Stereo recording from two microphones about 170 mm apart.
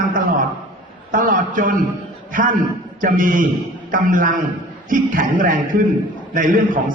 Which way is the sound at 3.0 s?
50° right (ahead or behind).